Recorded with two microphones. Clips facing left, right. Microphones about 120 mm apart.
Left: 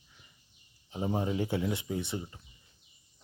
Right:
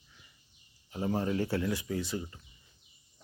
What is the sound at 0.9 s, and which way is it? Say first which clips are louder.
Speech: even; 15° left (ahead or behind).